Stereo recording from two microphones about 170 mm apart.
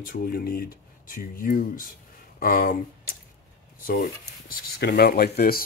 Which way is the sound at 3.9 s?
60° left (ahead or behind).